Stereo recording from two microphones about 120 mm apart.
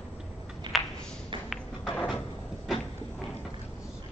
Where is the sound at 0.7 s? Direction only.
40° right (ahead or behind).